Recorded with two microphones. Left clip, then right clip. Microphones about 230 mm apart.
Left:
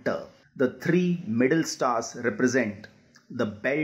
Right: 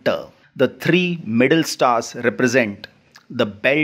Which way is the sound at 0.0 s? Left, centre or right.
Right.